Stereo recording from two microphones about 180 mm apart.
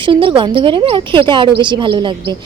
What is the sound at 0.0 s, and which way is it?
A woman's voice, 25° right (ahead or behind).